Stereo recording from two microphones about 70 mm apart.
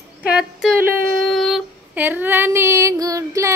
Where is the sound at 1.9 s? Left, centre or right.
Right.